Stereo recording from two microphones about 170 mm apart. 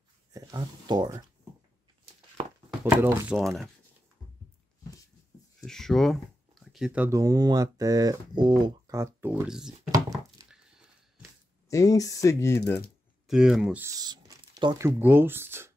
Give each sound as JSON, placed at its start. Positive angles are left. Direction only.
{"t": 0.3, "sound": "speech", "side_deg": -20}
{"t": 2.8, "sound": "speech", "side_deg": -15}
{"t": 3.3, "sound": "speech", "side_deg": 0}
{"t": 5.6, "sound": "speech", "side_deg": 5}
{"t": 9.7, "sound": "a sound", "side_deg": -20}
{"t": 11.7, "sound": "speech", "side_deg": 20}
{"t": 13.3, "sound": "speech", "side_deg": 0}
{"t": 13.8, "sound": "speech", "side_deg": -25}